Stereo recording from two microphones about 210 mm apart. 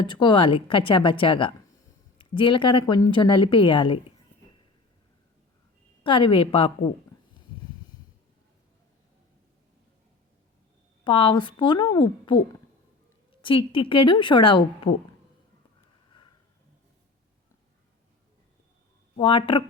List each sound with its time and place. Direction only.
0.0 s a woman's voice: 20° left (ahead or behind)
6.0 s a woman's voice: 25° left (ahead or behind)
11.0 s a woman's voice: 25° left (ahead or behind)
13.4 s a woman's voice: 25° left (ahead or behind)
19.1 s a woman's voice: 25° left (ahead or behind)